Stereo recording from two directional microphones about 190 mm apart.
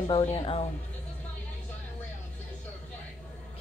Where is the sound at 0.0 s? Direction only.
30° left (ahead or behind).